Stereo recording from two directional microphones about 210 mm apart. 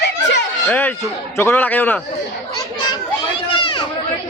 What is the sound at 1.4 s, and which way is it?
Speech, 10° left (ahead or behind).